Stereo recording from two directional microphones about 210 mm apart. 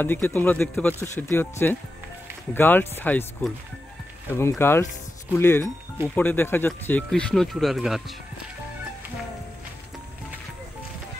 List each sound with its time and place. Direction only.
0.0 s speech: 10° left (ahead or behind)